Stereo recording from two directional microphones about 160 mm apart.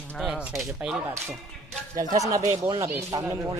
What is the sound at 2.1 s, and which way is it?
Speech, 20° right (ahead or behind).